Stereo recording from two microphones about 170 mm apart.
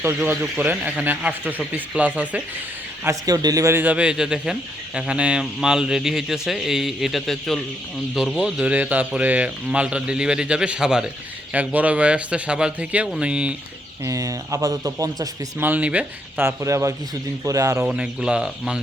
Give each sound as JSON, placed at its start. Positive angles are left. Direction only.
{"t": 0.0, "sound": "speech", "side_deg": -15}
{"t": 14.0, "sound": "speech", "side_deg": -20}
{"t": 17.8, "sound": "speech", "side_deg": -5}